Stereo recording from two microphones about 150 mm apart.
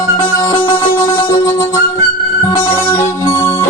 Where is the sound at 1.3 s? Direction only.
20° left (ahead or behind).